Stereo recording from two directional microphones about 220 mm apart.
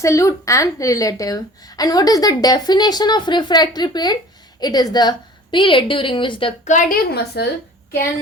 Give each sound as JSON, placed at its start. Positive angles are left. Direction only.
{"t": 0.0, "sound": "a woman's voice", "side_deg": 15}
{"t": 6.7, "sound": "a woman's voice", "side_deg": 35}